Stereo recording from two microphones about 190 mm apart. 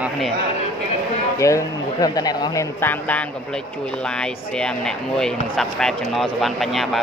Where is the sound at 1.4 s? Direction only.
15° left (ahead or behind).